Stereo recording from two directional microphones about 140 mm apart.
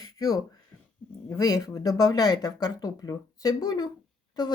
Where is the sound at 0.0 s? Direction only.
25° left (ahead or behind).